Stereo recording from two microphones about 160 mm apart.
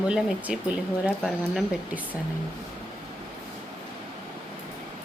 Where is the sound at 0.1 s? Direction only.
5° right (ahead or behind).